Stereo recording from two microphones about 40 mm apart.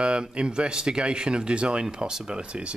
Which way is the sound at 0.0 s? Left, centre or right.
Right.